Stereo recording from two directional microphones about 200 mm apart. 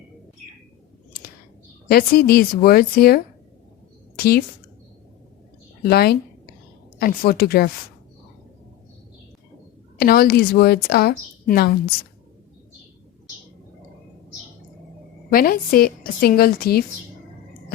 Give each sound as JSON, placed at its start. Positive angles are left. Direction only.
{"t": 1.9, "sound": "a woman's voice", "side_deg": 50}
{"t": 4.2, "sound": "speech", "side_deg": 50}
{"t": 5.8, "sound": "a woman's voice", "side_deg": 50}
{"t": 10.0, "sound": "a woman's voice", "side_deg": 50}
{"t": 15.3, "sound": "a woman's voice", "side_deg": 45}